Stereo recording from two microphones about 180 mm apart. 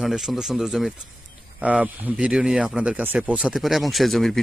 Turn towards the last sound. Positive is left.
turn(degrees=0)  # may be behind; listen again after turning